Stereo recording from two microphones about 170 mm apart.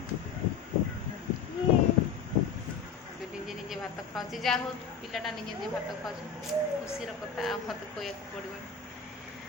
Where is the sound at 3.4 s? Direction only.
Centre (ahead or behind).